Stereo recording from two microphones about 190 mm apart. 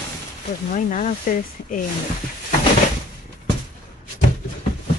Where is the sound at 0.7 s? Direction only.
40° left (ahead or behind).